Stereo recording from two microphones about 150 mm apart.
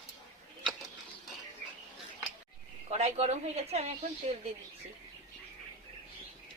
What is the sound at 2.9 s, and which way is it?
A woman's voice, 45° right (ahead or behind).